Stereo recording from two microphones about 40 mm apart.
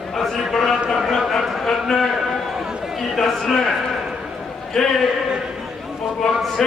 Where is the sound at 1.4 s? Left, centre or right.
Centre.